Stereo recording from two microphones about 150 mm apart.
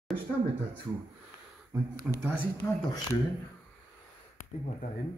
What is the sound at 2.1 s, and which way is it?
Speech, 5° right (ahead or behind).